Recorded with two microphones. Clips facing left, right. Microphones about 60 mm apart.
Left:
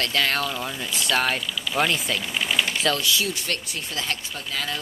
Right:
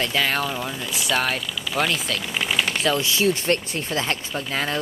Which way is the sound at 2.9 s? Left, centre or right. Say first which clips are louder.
Right 4 dB; right.